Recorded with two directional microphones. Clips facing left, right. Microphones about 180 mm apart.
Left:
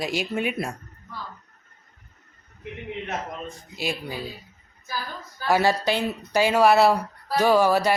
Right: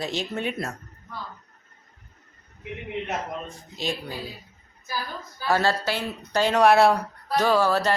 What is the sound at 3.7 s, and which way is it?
Speech, 10° left (ahead or behind).